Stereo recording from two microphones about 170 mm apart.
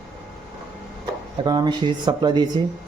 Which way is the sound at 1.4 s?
25° right (ahead or behind).